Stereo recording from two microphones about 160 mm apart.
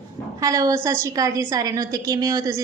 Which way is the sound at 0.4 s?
20° right (ahead or behind).